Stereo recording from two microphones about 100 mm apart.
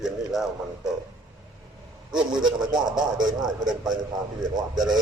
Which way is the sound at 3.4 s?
45° right (ahead or behind).